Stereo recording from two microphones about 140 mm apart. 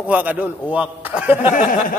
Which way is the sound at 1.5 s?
70° left (ahead or behind).